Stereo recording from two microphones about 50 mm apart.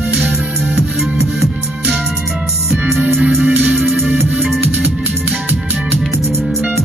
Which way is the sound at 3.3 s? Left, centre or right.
Right.